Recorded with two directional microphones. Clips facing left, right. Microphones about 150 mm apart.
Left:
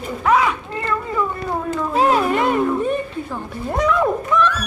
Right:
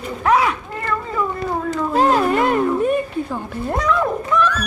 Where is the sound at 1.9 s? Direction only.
Centre (ahead or behind).